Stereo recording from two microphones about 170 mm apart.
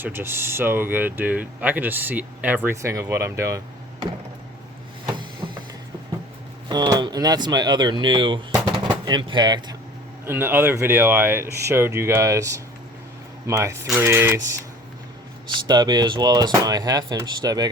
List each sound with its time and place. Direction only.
0.0 s speech: 15° right (ahead or behind)
5.4 s music: 25° right (ahead or behind)
6.7 s speech: 25° right (ahead or behind)
10.2 s speech: 10° right (ahead or behind)
15.5 s speech: 25° right (ahead or behind)